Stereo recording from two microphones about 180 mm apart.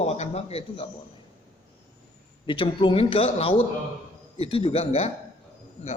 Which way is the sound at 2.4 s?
30° left (ahead or behind).